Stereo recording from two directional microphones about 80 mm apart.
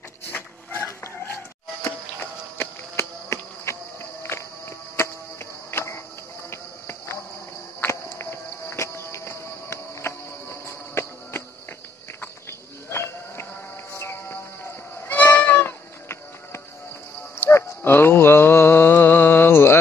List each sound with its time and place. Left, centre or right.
0.3 s dog: left
2.5 s a sound: left
7.8 s music: left
12.2 s livestock: left
13.9 s cat: left
15.6 s music: left
17.4 s mantra: left